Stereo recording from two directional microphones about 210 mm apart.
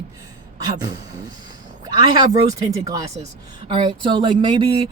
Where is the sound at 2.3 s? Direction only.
15° right (ahead or behind).